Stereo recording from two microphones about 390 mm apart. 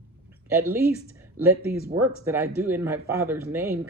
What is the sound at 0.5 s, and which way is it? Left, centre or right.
Speech, centre.